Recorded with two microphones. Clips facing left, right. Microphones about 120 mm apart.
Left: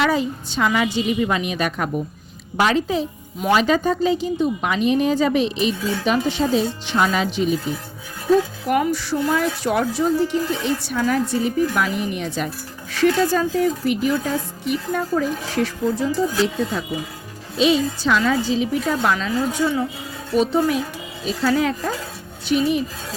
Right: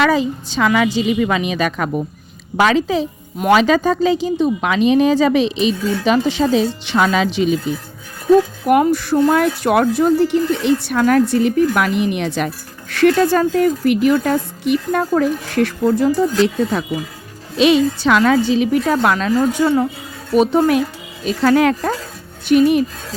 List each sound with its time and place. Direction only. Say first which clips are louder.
0.1 s a woman's voice: right 4 dB; 90° right
8.6 s speech: right 6 dB; 50° right (ahead or behind)
17.6 s a woman's voice: right 5 dB; 70° right (ahead or behind)